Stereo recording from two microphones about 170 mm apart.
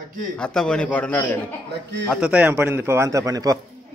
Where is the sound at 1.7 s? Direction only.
85° right.